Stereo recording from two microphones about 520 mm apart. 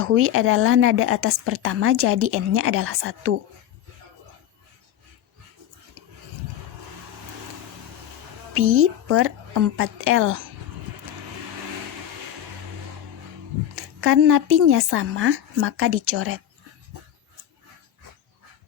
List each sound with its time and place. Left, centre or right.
0.0 s a woman's voice: right
8.5 s a woman's voice: right
13.7 s a woman's voice: right